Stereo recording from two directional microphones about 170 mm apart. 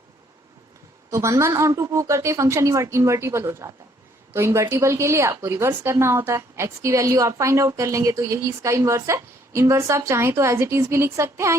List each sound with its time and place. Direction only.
1.1 s a woman's voice: 15° right (ahead or behind)